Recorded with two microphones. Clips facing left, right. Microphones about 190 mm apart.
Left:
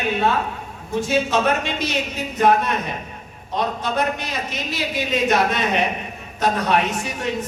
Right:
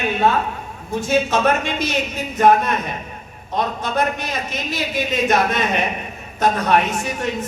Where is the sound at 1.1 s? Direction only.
50° right (ahead or behind).